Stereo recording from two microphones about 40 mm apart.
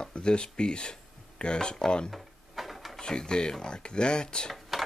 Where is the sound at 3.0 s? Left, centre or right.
Centre.